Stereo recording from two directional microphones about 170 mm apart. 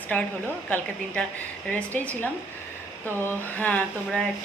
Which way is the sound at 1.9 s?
10° left (ahead or behind).